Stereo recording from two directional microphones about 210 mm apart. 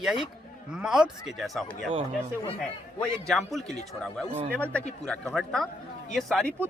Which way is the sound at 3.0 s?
Centre (ahead or behind).